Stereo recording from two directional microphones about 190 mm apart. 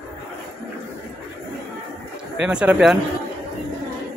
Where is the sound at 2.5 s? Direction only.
5° right (ahead or behind).